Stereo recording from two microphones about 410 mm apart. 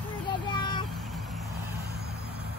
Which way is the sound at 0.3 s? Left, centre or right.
Centre.